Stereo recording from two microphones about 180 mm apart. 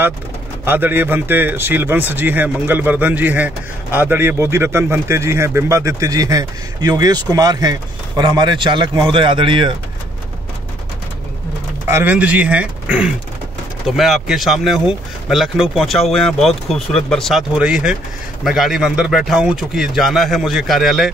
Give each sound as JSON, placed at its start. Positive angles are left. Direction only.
{"t": 0.7, "sound": "speech", "side_deg": -10}
{"t": 11.9, "sound": "speech", "side_deg": -10}